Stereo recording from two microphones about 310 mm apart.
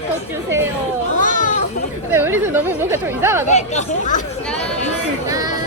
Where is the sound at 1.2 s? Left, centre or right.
Left.